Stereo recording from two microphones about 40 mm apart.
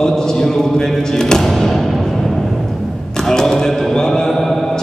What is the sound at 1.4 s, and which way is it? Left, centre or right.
Music, centre.